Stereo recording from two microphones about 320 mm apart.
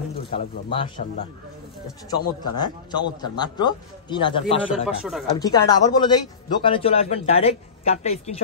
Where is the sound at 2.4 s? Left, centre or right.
Centre.